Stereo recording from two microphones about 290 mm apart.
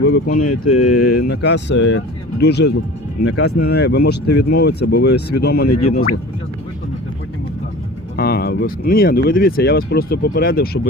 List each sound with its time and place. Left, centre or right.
0.0 s speech: left
0.4 s speech: left
1.2 s speech: left
3.2 s speech: left
3.6 s speech: left
8.1 s speech: left